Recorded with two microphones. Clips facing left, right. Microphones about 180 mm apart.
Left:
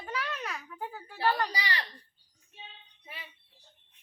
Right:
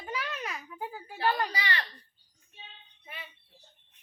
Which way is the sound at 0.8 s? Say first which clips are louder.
Right 2 dB; 5° right (ahead or behind).